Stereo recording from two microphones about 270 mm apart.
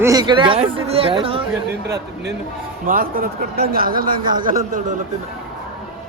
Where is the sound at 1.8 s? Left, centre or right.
Right.